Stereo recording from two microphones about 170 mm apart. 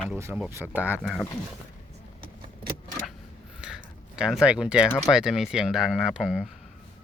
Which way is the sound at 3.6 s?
5° right (ahead or behind).